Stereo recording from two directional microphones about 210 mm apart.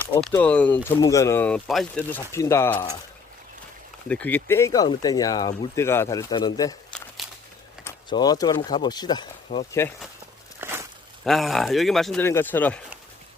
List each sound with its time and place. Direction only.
0.1 s speech: 5° left (ahead or behind)
4.1 s speech: 10° left (ahead or behind)
7.9 s speech: 20° left (ahead or behind)
10.6 s a sound: 10° right (ahead or behind)
11.3 s speech: centre (ahead or behind)